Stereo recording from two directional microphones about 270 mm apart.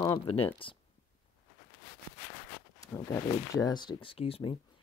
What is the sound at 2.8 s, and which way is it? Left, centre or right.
Speech, centre.